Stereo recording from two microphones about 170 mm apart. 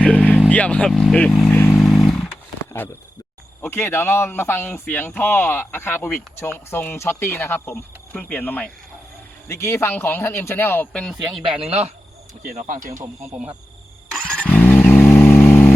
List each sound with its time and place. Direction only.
0.0 s vehicle: 5° left (ahead or behind)
0.5 s speech: 5° left (ahead or behind)
1.8 s vehicle: 5° left (ahead or behind)
3.6 s a man's voice: 15° left (ahead or behind)
11.1 s speech: 5° right (ahead or behind)
11.6 s cricket: 40° right (ahead or behind)
12.4 s speech: 50° right (ahead or behind)
14.1 s vehicle: 5° left (ahead or behind)